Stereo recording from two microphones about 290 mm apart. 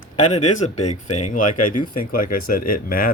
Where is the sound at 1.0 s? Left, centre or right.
Left.